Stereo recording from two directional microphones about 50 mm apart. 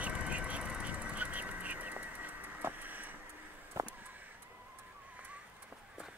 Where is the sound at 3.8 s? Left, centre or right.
Right.